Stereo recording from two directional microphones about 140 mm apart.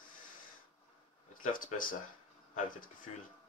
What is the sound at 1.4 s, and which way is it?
Speech, 70° left (ahead or behind).